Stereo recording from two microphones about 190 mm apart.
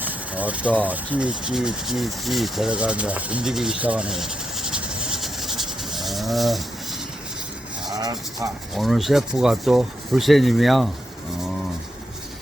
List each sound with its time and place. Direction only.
0.0 s speech: 10° right (ahead or behind)
7.9 s speech: 20° right (ahead or behind)
8.7 s speech: centre (ahead or behind)